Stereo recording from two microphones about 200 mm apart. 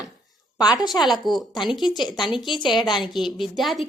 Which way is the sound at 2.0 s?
20° left (ahead or behind).